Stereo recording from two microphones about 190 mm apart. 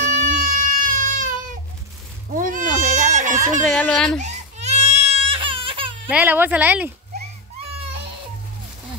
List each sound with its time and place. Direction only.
0.2 s baby cry: 45° right (ahead or behind)
2.3 s bleat: 45° right (ahead or behind)
3.6 s a child's voice: 5° left (ahead or behind)
4.2 s baby cry: 35° right (ahead or behind)
6.0 s a woman's voice: 10° right (ahead or behind)